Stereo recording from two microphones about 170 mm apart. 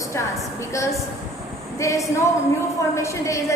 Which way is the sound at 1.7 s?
20° left (ahead or behind).